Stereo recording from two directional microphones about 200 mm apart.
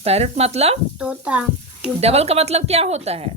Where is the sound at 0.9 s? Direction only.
5° right (ahead or behind).